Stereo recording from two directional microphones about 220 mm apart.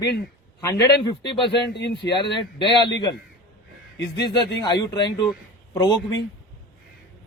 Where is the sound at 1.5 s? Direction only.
50° left (ahead or behind).